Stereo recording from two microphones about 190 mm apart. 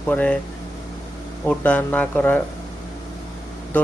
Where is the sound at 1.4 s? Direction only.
5° left (ahead or behind).